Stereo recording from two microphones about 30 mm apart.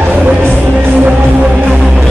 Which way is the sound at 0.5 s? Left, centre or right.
Right.